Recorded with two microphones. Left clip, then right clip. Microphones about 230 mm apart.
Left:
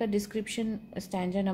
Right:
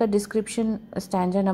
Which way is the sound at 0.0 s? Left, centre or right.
Centre.